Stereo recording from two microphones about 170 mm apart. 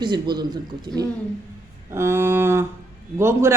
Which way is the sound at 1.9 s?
15° right (ahead or behind).